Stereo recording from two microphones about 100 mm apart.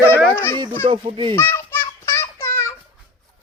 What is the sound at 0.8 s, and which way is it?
Speech, 60° right (ahead or behind).